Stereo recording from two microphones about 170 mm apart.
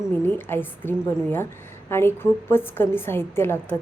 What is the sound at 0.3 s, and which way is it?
A woman's voice, 10° left (ahead or behind).